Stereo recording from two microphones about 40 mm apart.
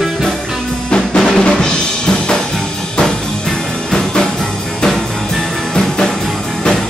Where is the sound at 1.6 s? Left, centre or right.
Centre.